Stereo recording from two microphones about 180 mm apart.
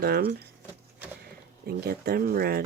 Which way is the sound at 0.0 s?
60° right (ahead or behind).